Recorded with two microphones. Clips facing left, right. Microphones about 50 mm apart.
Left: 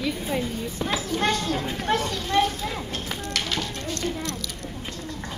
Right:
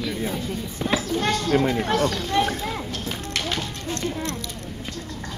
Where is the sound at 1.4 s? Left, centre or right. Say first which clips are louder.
Right 5 dB; right.